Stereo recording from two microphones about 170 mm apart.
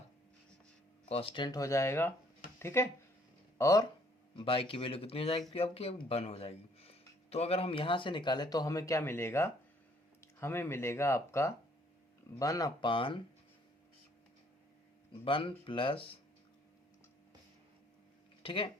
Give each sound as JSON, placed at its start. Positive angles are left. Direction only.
{"t": 1.0, "sound": "speech", "side_deg": 35}
{"t": 4.4, "sound": "speech", "side_deg": 30}
{"t": 15.1, "sound": "speech", "side_deg": 30}
{"t": 18.4, "sound": "speech", "side_deg": 30}